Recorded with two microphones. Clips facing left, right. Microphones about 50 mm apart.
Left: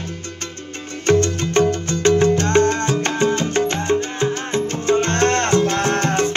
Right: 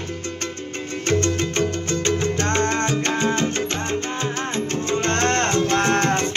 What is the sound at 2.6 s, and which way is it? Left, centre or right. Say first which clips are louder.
Salsa music: left 3 dB; right.